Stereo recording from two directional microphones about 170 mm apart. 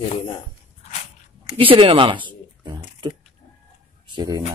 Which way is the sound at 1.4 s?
30° right (ahead or behind).